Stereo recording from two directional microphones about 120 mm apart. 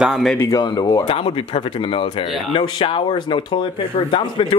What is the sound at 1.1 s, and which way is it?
Speech, 50° left (ahead or behind).